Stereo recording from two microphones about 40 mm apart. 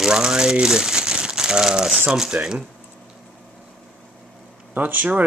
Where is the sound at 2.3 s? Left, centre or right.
Right.